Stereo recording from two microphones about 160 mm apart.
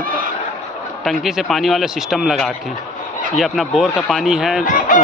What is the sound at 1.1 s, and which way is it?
A man's voice, centre (ahead or behind).